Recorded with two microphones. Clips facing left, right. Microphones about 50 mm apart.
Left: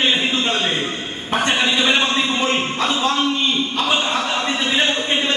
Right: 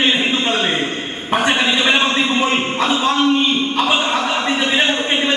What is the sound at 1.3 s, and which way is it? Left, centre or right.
Speech, centre.